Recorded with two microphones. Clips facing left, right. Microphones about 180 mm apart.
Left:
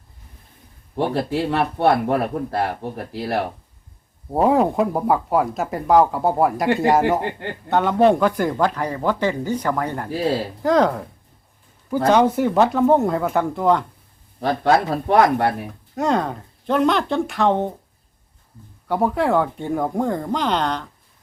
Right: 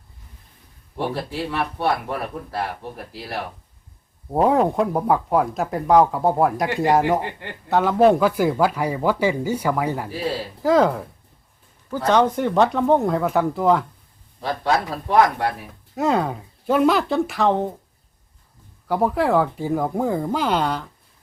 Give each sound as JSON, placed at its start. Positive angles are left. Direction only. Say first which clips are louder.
{"t": 1.1, "sound": "speech", "louder": "left 5 dB", "side_deg": 55}
{"t": 4.3, "sound": "speech", "louder": "left 1 dB", "side_deg": 0}
{"t": 12.0, "sound": "speech", "louder": "left 2 dB", "side_deg": 10}
{"t": 14.4, "sound": "speech", "louder": "left 4 dB", "side_deg": 55}
{"t": 16.0, "sound": "speech", "louder": "even", "side_deg": -5}
{"t": 18.9, "sound": "speech", "louder": "even", "side_deg": 0}